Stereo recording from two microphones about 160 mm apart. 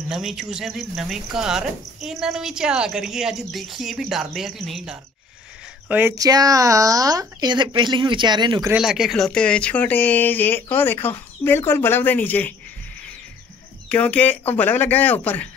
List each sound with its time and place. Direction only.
0.1 s speech: centre (ahead or behind)
5.9 s speech: 15° right (ahead or behind)
8.7 s speech: 5° right (ahead or behind)
13.8 s speech: 10° left (ahead or behind)